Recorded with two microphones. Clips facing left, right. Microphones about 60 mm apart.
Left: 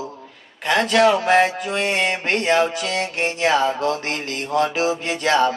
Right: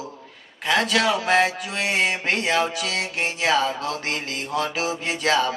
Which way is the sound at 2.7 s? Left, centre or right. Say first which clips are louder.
Left 3 dB; left.